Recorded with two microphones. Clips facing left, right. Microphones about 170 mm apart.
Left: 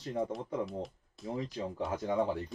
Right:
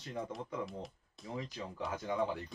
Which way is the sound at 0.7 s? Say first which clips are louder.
Left 6 dB; centre (ahead or behind).